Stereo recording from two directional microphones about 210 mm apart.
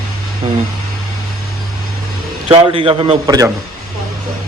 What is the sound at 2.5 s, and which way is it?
A man's voice, 25° right (ahead or behind).